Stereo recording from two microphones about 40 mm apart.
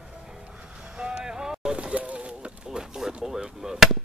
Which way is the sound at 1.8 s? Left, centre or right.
Right.